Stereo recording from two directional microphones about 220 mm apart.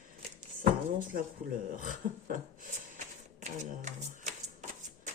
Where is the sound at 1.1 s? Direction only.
45° right (ahead or behind).